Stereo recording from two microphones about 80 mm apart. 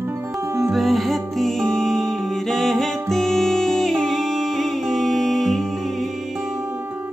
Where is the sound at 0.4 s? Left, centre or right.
Right.